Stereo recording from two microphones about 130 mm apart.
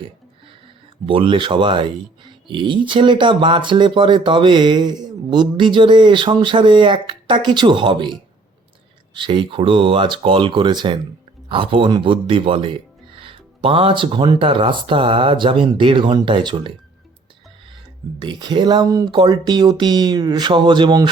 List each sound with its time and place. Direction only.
1.0 s speech: 40° right (ahead or behind)
18.2 s speech: 35° right (ahead or behind)